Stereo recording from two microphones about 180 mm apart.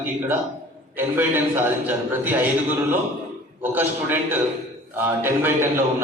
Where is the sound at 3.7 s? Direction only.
10° right (ahead or behind).